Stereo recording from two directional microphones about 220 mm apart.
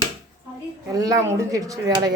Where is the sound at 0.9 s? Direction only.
15° right (ahead or behind).